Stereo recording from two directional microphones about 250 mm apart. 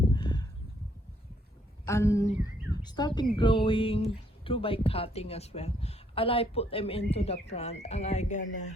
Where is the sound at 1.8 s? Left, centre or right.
Centre.